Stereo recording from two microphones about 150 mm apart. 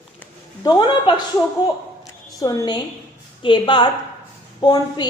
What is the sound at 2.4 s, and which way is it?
A woman's voice, 25° left (ahead or behind).